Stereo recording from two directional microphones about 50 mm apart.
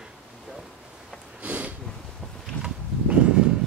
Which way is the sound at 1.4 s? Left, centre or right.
Right.